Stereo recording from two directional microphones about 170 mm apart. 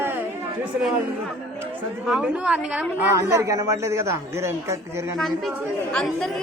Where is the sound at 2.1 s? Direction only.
5° right (ahead or behind).